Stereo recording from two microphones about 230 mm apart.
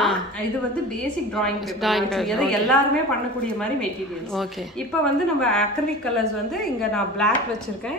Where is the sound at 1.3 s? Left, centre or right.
Centre.